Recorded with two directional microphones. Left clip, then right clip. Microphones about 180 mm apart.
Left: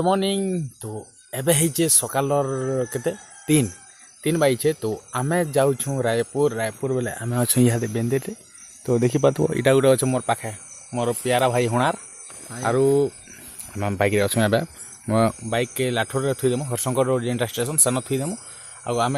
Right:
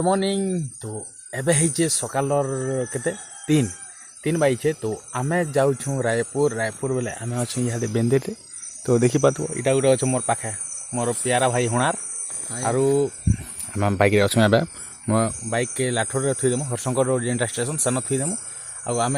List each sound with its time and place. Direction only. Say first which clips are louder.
0.0 s speech: even; 10° left (ahead or behind)
6.9 s speech: left 1 dB; 30° left (ahead or behind); by 7.8 s 60° left (ahead or behind)
7.9 s speech: right 3 dB; 5° right (ahead or behind)
9.4 s speech: left 3 dB; 65° left (ahead or behind); by 13.1 s 35° left (ahead or behind)
13.7 s speech: right 2 dB; 10° right (ahead or behind)
15.4 s speech: left 1 dB; 15° left (ahead or behind)